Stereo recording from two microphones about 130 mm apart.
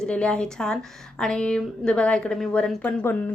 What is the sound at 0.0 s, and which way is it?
A woman's voice, 10° left (ahead or behind).